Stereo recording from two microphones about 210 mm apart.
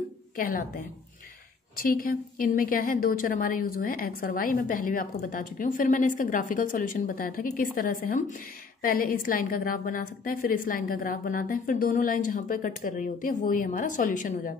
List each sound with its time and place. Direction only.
0.4 s a woman's voice: 40° left (ahead or behind)